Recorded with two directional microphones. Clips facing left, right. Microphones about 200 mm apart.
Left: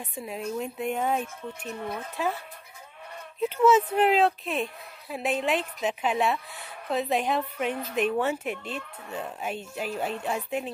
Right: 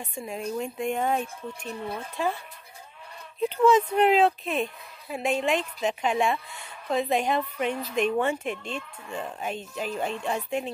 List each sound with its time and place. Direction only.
0.1 s speech: 5° left (ahead or behind)
1.7 s speech: 30° right (ahead or behind)
3.4 s speech: 5° left (ahead or behind)